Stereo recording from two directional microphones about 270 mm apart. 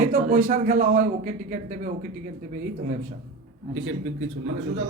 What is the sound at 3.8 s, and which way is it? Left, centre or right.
Speech, right.